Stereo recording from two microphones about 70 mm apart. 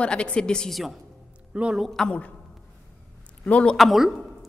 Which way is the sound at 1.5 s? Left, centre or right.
Centre.